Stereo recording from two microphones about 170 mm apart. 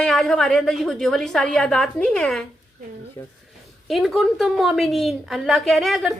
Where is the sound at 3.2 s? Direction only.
15° left (ahead or behind).